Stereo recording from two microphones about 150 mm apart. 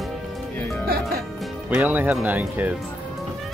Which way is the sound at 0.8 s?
85° right.